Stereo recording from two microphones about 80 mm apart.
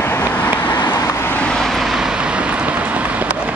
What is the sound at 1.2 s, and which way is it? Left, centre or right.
Vehicle, centre.